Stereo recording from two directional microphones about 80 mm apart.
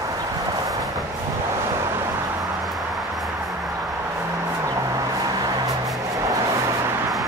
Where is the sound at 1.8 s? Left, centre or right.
Right.